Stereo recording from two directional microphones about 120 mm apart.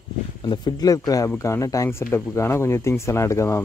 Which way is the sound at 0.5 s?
35° left (ahead or behind).